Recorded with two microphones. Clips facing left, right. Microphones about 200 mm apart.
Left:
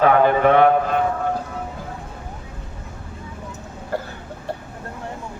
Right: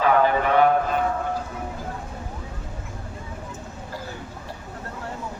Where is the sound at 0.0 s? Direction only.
55° left (ahead or behind).